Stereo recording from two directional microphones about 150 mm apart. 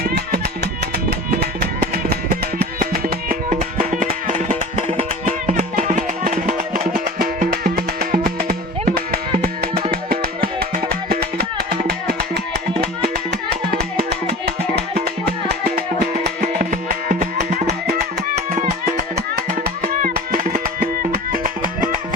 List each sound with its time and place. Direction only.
0.0 s music: 90° right
1.4 s music: 90° right; by 8.5 s 70° right (ahead or behind)
9.9 s music: 85° right
13.7 s music: 90° right
16.2 s music: 75° right (ahead or behind); by 17.7 s 55° right (ahead or behind)
17.7 s music: 90° right
18.3 s music: 50° right (ahead or behind)
19.1 s music: 80° right